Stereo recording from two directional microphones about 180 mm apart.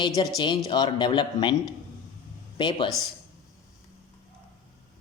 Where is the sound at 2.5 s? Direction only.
25° left (ahead or behind).